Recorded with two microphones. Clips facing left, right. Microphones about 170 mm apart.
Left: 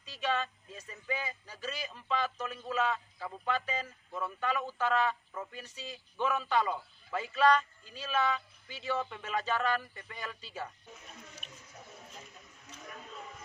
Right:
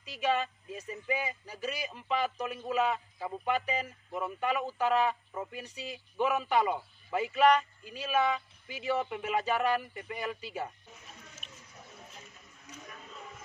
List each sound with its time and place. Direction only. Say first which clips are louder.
0.0 s speech: right 3 dB; 15° right (ahead or behind)
11.4 s water: left 1 dB; centre (ahead or behind)